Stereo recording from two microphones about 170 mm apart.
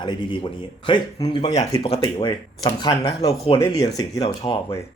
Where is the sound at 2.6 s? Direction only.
20° left (ahead or behind).